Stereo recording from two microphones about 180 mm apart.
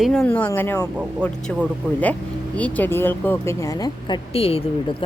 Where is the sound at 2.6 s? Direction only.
10° left (ahead or behind).